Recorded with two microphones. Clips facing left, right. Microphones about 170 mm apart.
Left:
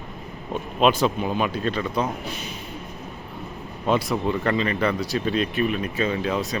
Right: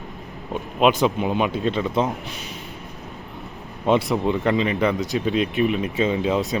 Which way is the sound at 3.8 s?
20° right (ahead or behind).